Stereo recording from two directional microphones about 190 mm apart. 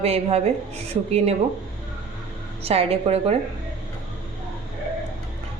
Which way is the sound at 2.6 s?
30° right (ahead or behind).